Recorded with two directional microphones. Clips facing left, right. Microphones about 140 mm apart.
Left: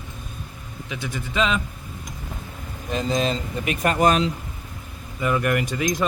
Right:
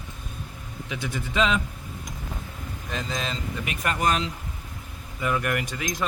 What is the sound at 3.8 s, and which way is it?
Speech, 35° left (ahead or behind).